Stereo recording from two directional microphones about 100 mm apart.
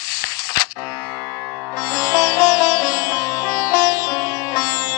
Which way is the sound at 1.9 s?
40° left (ahead or behind).